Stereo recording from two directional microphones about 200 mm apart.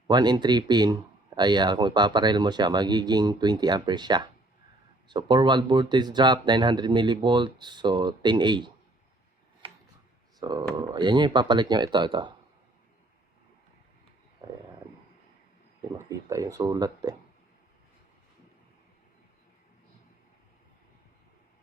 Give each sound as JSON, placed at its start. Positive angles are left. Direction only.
{"t": 0.1, "sound": "speech", "side_deg": -20}
{"t": 9.6, "sound": "a sound", "side_deg": -25}
{"t": 10.4, "sound": "speech", "side_deg": -20}
{"t": 16.0, "sound": "speech", "side_deg": -15}